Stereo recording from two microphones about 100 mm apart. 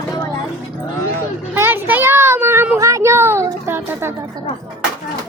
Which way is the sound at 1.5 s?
20° right (ahead or behind).